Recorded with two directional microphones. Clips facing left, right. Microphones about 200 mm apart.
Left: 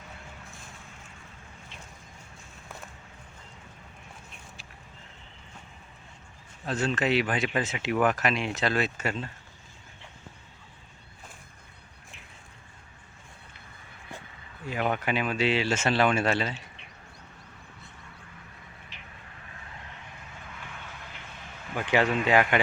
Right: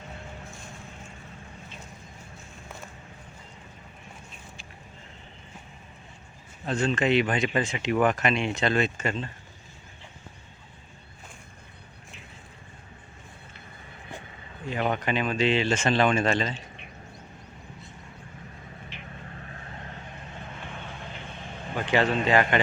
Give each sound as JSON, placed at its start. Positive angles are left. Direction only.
{"t": 6.7, "sound": "speech", "side_deg": 5}
{"t": 14.7, "sound": "speech", "side_deg": 5}
{"t": 19.1, "sound": "vehicle", "side_deg": -40}
{"t": 21.8, "sound": "a sound", "side_deg": 10}
{"t": 22.3, "sound": "speech", "side_deg": 10}